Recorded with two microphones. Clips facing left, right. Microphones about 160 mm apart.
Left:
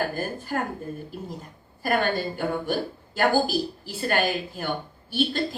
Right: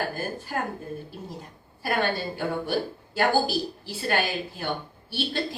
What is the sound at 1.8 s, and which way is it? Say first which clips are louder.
A woman's voice: left 2 dB; 50° left (ahead or behind).